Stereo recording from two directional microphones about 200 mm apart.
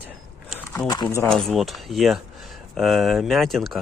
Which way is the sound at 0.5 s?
10° left (ahead or behind).